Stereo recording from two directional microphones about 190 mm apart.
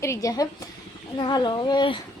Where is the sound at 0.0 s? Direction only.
15° left (ahead or behind).